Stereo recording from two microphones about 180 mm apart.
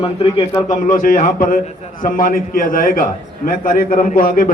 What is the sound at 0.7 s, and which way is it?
A man's voice, 50° left (ahead or behind).